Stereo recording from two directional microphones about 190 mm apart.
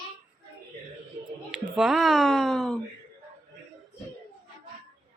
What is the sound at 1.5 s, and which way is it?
A woman's voice, 5° right (ahead or behind).